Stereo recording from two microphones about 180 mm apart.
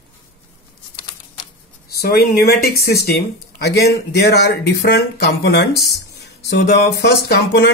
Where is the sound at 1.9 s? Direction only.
60° left (ahead or behind).